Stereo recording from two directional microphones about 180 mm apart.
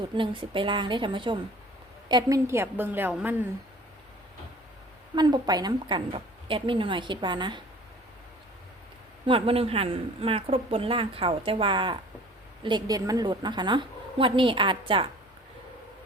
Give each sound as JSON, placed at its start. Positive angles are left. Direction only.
{"t": 0.1, "sound": "a woman's voice", "side_deg": -25}
{"t": 5.1, "sound": "a woman's voice", "side_deg": -25}
{"t": 9.2, "sound": "a woman's voice", "side_deg": -30}